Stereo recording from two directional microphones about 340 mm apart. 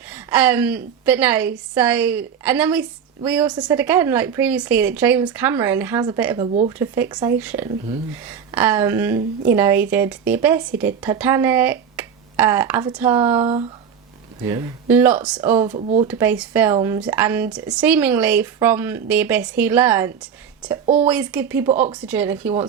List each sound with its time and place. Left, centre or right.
0.1 s speech: centre
15.6 s speech: centre
16.0 s speech: centre